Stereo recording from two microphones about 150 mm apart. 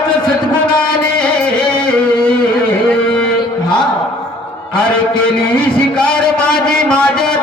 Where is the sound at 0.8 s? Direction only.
5° left (ahead or behind).